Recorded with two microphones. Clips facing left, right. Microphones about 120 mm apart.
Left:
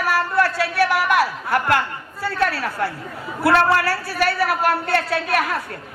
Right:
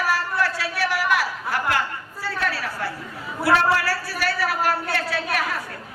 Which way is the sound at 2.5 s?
55° left (ahead or behind).